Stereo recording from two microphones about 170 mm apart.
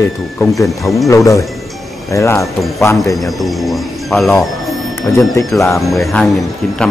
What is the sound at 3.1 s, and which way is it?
Speech, centre (ahead or behind).